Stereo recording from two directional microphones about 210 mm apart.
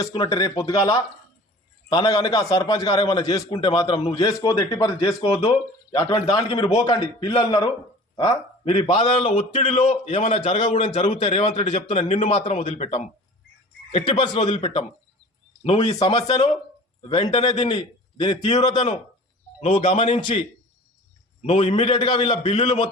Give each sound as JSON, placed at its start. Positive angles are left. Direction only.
{"t": 0.0, "sound": "a man's voice", "side_deg": 20}
{"t": 21.4, "sound": "speech", "side_deg": 30}